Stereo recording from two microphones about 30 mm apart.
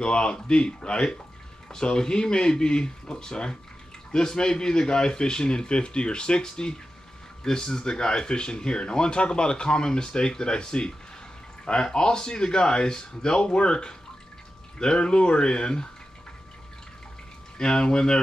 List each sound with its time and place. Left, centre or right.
0.0 s speech: left
17.6 s speech: left